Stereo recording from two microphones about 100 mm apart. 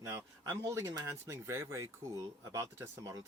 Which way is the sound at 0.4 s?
30° right (ahead or behind).